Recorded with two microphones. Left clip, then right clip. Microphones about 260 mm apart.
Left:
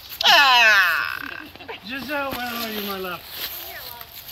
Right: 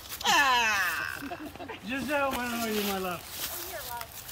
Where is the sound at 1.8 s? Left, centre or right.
Centre.